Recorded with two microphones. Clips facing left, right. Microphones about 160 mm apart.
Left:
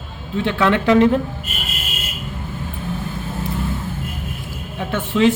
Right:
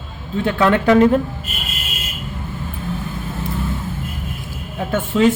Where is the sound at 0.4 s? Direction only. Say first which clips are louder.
Right 2 dB; 45° right (ahead or behind).